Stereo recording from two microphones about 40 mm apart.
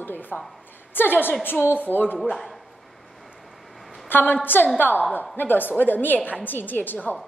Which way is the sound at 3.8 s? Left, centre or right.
Centre.